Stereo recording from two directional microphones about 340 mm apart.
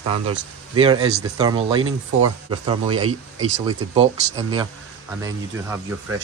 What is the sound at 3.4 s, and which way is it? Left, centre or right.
Speech, centre.